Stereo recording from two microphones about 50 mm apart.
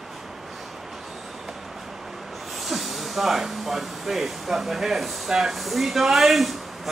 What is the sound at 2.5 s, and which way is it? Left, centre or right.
A man's voice, centre.